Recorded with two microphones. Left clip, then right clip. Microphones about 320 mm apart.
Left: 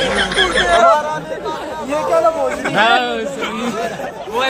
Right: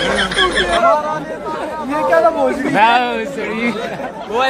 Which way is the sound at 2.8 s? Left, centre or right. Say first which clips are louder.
Right 1 dB; centre.